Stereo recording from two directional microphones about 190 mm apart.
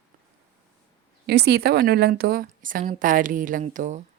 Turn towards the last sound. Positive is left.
turn(degrees=-40)  # may be behind; listen again after turning